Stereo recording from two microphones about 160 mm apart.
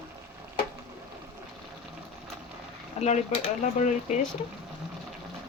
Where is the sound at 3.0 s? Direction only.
45° left (ahead or behind).